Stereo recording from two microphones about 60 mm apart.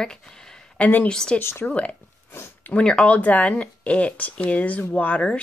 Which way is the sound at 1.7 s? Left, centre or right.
Left.